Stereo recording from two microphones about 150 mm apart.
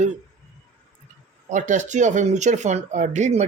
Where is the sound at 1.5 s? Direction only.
55° right (ahead or behind).